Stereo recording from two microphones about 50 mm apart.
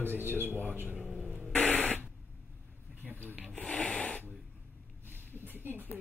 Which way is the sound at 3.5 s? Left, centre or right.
Centre.